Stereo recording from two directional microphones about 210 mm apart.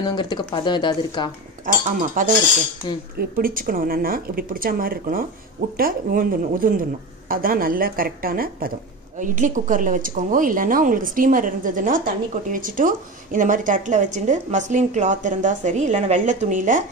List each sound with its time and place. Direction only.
0.0 s speech: 20° left (ahead or behind)
1.7 s a woman's voice: 40° right (ahead or behind)